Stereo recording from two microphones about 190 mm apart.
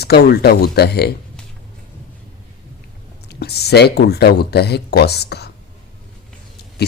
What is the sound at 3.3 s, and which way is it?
Speech, 60° left (ahead or behind).